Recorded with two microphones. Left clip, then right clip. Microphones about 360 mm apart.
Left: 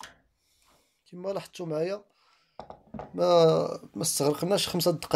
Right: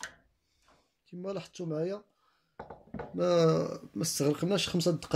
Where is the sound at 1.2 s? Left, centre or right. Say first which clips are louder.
Left 5 dB; centre.